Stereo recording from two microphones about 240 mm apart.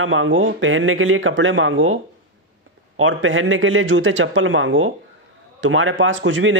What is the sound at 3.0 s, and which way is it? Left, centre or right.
A man's voice, right.